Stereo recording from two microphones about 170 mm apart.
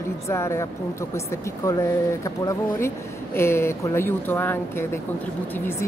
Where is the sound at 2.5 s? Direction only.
15° left (ahead or behind).